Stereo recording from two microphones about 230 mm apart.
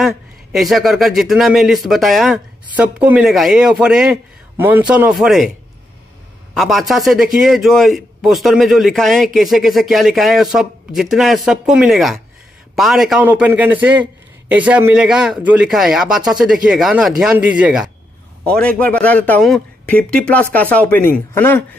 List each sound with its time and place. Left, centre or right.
0.0 s a man's voice: centre
6.5 s a man's voice: centre